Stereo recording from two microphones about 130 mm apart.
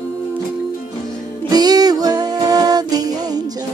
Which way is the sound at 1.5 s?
30° right (ahead or behind).